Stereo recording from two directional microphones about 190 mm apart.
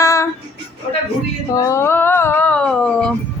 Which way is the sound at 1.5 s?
15° left (ahead or behind).